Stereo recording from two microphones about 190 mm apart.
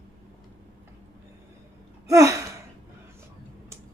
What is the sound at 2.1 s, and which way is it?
Gasp, 15° right (ahead or behind).